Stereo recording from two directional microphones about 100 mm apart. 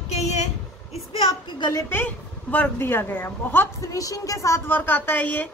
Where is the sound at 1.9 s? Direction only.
20° left (ahead or behind).